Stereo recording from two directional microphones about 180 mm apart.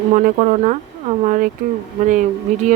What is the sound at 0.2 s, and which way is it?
Speech, 45° right (ahead or behind).